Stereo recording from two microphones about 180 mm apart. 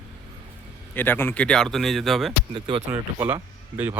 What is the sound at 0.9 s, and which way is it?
A man's voice, 10° left (ahead or behind).